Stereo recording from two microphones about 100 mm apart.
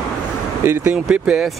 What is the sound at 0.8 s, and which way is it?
Speech, 10° right (ahead or behind).